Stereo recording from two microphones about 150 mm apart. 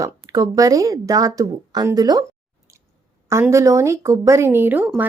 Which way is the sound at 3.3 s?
20° right (ahead or behind).